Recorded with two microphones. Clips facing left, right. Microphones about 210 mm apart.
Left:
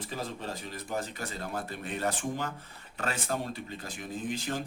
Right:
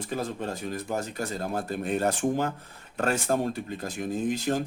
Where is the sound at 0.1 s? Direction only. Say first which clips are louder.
Right 7 dB; 50° right (ahead or behind).